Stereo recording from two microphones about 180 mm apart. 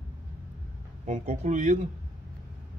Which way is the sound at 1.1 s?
40° right (ahead or behind).